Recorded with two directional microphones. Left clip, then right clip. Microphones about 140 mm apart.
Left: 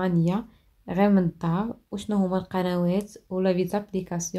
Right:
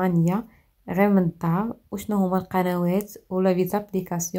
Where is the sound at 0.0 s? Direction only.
15° right (ahead or behind).